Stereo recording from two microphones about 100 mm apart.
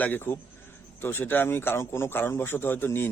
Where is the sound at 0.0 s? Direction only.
20° left (ahead or behind).